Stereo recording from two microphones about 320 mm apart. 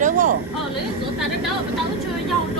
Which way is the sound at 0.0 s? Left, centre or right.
Right.